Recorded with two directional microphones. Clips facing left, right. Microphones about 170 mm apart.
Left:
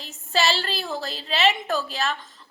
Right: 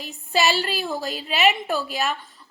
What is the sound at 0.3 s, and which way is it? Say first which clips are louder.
A woman's voice: right 2 dB; 15° right (ahead or behind).